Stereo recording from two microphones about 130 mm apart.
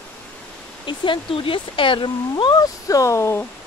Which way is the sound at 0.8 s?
40° left (ahead or behind).